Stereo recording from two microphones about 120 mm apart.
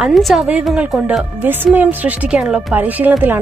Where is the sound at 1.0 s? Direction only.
15° right (ahead or behind).